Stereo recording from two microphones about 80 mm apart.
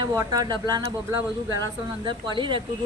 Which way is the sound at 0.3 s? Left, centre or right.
Right.